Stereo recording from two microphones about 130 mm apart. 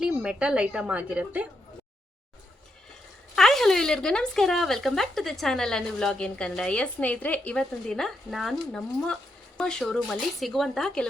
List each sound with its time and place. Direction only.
0.0 s a woman's voice: 5° right (ahead or behind)
3.3 s speech: 5° left (ahead or behind)